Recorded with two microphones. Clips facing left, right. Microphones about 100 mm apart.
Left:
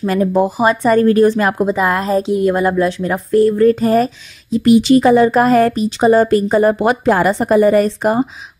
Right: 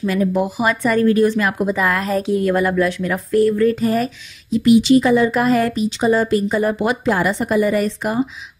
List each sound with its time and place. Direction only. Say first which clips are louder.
0.0 s speech: left 4 dB; 40° left (ahead or behind)
1.7 s speech: left 3 dB; 25° left (ahead or behind)
4.8 s speech: left 4 dB; 50° left (ahead or behind)